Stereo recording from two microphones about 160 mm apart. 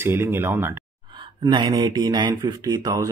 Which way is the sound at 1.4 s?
25° right (ahead or behind).